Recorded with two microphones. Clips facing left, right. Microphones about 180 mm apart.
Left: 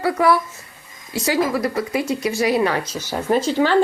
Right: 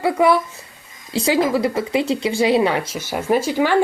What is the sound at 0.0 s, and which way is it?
Speech, 20° right (ahead or behind).